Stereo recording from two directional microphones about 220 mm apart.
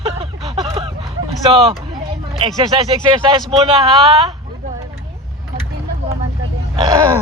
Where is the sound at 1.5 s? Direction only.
25° right (ahead or behind).